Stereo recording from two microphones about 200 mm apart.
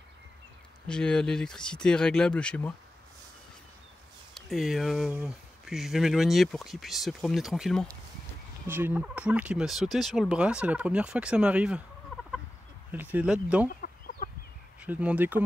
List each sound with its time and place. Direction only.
0.8 s speech: 5° left (ahead or behind)
4.3 s speech: centre (ahead or behind)
8.6 s speech: 10° right (ahead or behind)
12.9 s speech: 10° right (ahead or behind)
13.7 s chicken: 45° left (ahead or behind)
14.8 s speech: 5° right (ahead or behind)